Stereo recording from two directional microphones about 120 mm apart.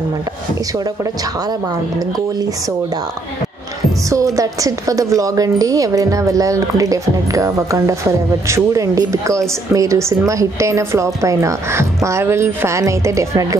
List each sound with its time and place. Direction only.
0.7 s a woman's voice: 30° right (ahead or behind)
4.1 s a woman's voice: 30° right (ahead or behind)